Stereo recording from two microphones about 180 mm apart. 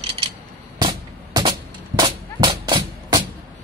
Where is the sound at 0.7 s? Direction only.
25° right (ahead or behind).